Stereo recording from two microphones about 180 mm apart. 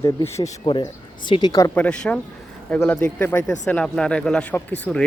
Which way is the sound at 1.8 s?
5° left (ahead or behind).